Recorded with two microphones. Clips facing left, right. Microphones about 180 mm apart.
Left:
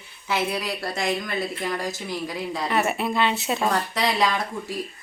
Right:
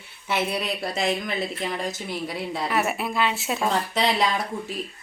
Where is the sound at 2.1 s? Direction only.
25° right (ahead or behind).